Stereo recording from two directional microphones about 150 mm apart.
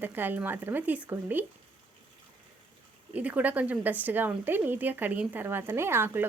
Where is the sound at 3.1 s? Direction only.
10° right (ahead or behind).